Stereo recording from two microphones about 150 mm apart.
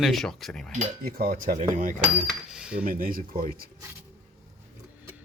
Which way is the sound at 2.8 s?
70° right (ahead or behind).